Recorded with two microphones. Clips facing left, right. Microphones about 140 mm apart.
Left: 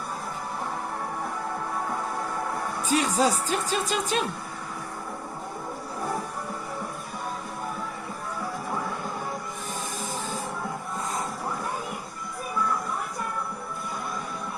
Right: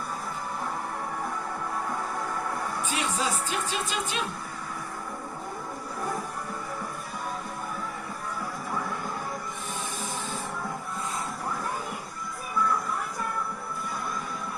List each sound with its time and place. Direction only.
2.8 s speech: 40° left (ahead or behind)